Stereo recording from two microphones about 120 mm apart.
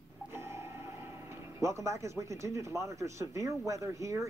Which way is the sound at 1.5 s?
25° right (ahead or behind).